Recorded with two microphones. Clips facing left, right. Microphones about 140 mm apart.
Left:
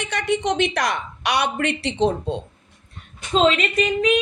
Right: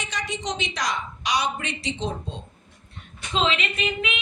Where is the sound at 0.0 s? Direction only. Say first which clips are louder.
Left 8 dB; 60° left (ahead or behind).